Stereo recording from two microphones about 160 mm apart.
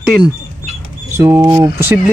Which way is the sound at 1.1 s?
20° right (ahead or behind).